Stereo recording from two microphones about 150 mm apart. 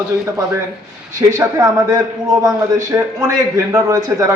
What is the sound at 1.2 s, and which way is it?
A man's voice, 20° right (ahead or behind).